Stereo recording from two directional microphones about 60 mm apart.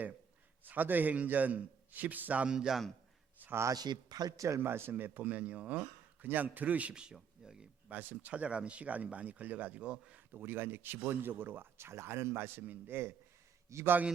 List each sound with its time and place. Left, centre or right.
0.6 s speech: right
2.5 s a man's voice: centre
3.4 s a sound: right
3.7 s a man's voice: right
4.6 s speech: right; by 7.7 s centre
7.9 s speech: right
10.3 s speech: right
13.7 s a man's voice: right